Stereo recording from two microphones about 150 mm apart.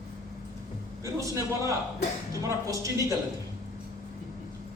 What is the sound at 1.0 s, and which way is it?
A man's voice, 20° right (ahead or behind).